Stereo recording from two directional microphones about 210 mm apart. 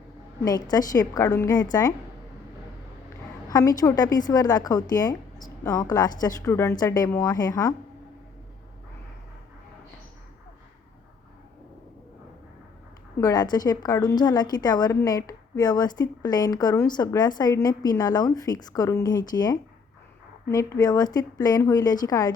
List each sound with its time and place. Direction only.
0.4 s a woman's voice: 20° left (ahead or behind)
3.5 s a woman's voice: 20° left (ahead or behind)
13.2 s a woman's voice: 20° left (ahead or behind)